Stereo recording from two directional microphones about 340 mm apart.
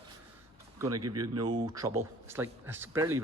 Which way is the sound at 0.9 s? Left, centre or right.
Right.